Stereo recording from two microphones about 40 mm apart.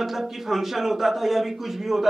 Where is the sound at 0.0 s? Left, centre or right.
Centre.